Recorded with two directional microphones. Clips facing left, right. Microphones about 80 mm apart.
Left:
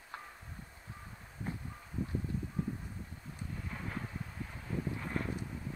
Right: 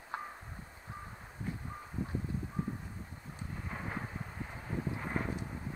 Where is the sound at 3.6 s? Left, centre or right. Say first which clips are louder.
Right 3 dB; right.